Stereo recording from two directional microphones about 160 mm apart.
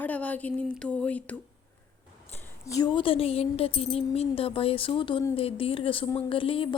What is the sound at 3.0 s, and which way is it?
A woman's voice, 35° left (ahead or behind).